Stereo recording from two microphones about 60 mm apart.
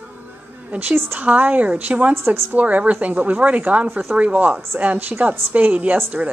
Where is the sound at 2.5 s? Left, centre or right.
Right.